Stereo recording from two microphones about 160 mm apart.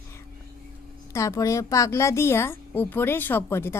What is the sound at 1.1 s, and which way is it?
A woman's voice, 20° left (ahead or behind).